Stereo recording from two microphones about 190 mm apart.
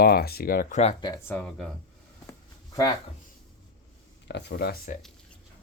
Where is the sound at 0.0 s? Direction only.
55° left (ahead or behind); by 0.9 s 40° left (ahead or behind).